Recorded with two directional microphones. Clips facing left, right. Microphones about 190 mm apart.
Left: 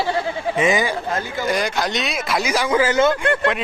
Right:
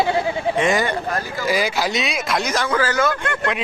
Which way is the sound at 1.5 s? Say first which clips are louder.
Right 2 dB; 5° right (ahead or behind).